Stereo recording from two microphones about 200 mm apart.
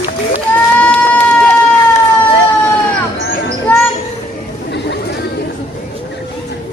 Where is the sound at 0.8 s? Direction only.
5° left (ahead or behind).